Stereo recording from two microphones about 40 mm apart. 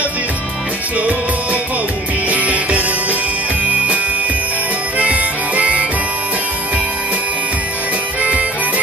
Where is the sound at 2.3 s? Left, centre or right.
Right.